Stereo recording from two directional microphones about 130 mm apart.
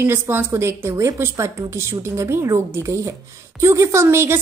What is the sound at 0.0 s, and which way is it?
A woman's voice, 15° right (ahead or behind).